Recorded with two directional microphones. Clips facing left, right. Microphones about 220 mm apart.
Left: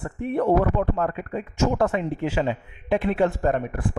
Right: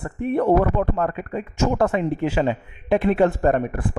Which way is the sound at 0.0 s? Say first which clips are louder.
Right 3 dB; 55° right (ahead or behind).